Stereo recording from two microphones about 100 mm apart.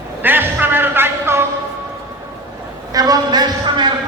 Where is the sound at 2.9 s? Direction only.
40° right (ahead or behind).